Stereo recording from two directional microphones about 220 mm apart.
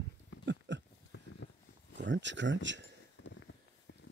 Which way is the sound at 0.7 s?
55° right (ahead or behind).